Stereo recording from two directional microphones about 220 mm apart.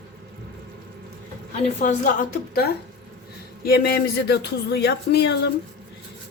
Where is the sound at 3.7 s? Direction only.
45° left (ahead or behind).